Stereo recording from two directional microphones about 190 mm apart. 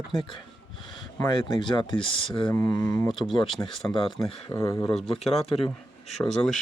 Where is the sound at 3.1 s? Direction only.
Centre (ahead or behind).